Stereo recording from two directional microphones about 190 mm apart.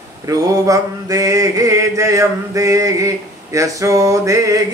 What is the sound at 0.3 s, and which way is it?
Mantra, 20° right (ahead or behind).